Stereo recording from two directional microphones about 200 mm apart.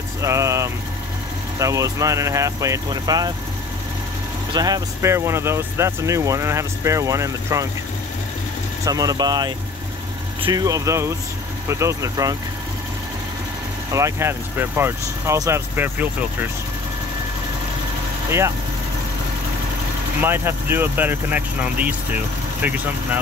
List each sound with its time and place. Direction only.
0.2 s speech: 15° right (ahead or behind)
4.6 s speech: 20° right (ahead or behind)
8.8 s speech: 20° right (ahead or behind)
13.9 s speech: 15° right (ahead or behind)
20.2 s speech: 10° right (ahead or behind)